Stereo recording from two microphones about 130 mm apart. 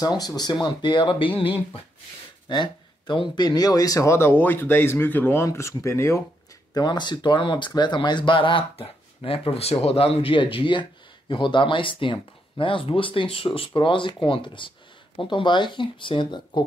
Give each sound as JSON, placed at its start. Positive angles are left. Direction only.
{"t": 0.0, "sound": "speech", "side_deg": 30}
{"t": 6.7, "sound": "speech", "side_deg": 35}